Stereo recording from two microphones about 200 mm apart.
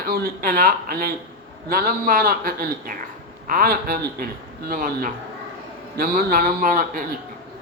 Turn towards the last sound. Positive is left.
turn(degrees=-45)  # may be behind; listen again after turning